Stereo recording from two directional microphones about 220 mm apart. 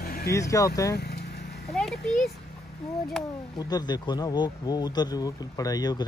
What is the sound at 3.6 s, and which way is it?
Speech, 20° left (ahead or behind).